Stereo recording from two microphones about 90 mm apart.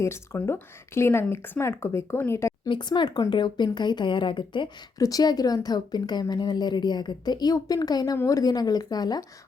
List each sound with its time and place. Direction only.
0.3 s speech: 25° left (ahead or behind)
2.6 s speech: 60° left (ahead or behind)
4.9 s speech: 40° left (ahead or behind)